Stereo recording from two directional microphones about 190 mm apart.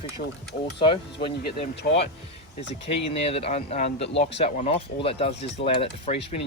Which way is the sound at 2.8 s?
30° left (ahead or behind).